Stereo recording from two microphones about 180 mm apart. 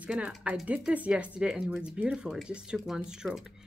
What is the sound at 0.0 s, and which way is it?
Speech, 5° right (ahead or behind).